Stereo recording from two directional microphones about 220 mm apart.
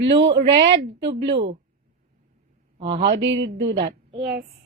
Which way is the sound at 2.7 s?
25° right (ahead or behind).